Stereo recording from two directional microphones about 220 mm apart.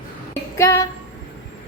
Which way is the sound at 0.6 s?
15° left (ahead or behind).